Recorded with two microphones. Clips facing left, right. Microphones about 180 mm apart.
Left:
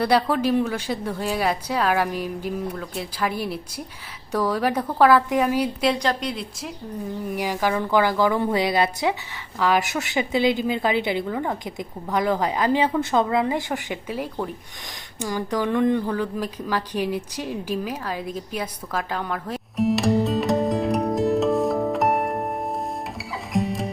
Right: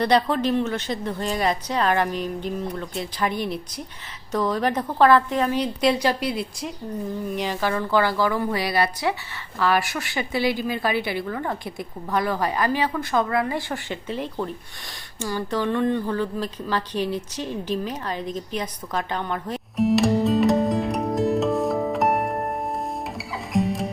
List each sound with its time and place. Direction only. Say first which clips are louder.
0.0 s a woman's voice: even; 5° left (ahead or behind)
5.9 s a woman's voice: right 2 dB; 5° right (ahead or behind)
7.3 s a woman's voice: left 3 dB; 10° left (ahead or behind)
16.1 s a sound: even; 10° left (ahead or behind)